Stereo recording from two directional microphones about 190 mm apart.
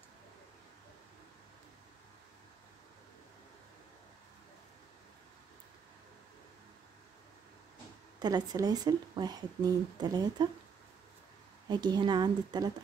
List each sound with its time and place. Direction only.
8.2 s speech: 20° right (ahead or behind)
11.6 s speech: 20° right (ahead or behind)